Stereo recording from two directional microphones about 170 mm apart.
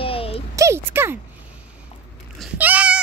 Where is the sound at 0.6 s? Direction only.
15° right (ahead or behind).